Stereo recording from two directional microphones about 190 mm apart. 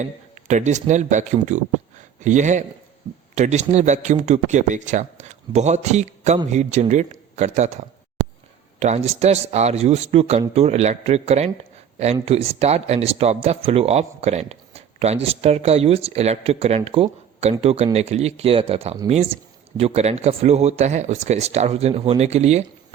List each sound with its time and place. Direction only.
0.0 s speech: 40° right (ahead or behind)
8.8 s speech: 35° right (ahead or behind)